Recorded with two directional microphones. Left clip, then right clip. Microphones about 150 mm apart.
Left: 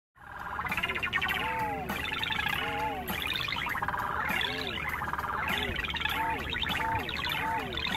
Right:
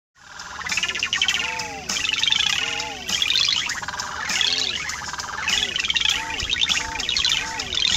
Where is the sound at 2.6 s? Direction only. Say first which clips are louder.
Right 6 dB; 35° right (ahead or behind).